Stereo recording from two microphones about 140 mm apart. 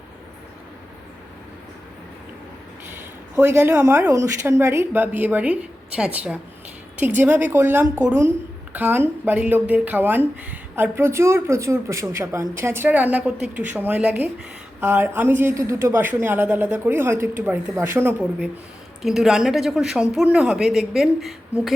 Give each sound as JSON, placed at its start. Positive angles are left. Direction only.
{"t": 3.3, "sound": "speech", "side_deg": -20}